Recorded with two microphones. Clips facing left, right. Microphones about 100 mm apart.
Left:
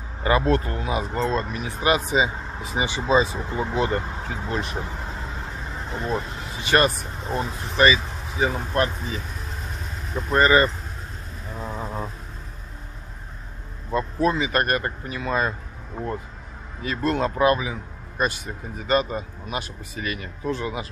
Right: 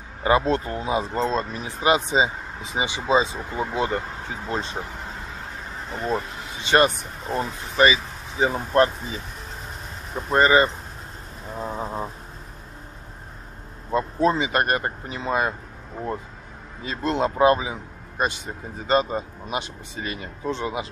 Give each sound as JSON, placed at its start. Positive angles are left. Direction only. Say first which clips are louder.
{"t": 0.2, "sound": "speech", "louder": "even", "side_deg": -20}
{"t": 6.6, "sound": "speech", "louder": "right 1 dB", "side_deg": -20}
{"t": 8.7, "sound": "speech", "louder": "right 4 dB", "side_deg": -30}
{"t": 10.1, "sound": "speech", "louder": "even", "side_deg": -20}
{"t": 11.5, "sound": "a sound", "louder": "right 2 dB", "side_deg": -20}
{"t": 13.8, "sound": "speech", "louder": "right 1 dB", "side_deg": -25}
{"t": 16.8, "sound": "speech", "louder": "even", "side_deg": -25}